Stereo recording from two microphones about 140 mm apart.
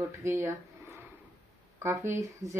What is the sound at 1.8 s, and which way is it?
Speech, 20° right (ahead or behind).